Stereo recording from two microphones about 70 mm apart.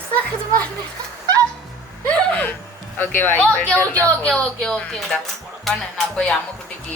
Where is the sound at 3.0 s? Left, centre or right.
Left; by 4.8 s centre.